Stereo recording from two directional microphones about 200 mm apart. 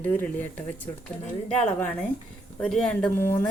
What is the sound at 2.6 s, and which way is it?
Speech, 5° left (ahead or behind).